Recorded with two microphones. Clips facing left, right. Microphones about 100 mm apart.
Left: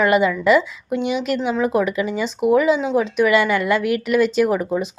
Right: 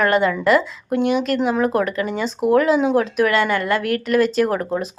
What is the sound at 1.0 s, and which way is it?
Speech, 50° right (ahead or behind).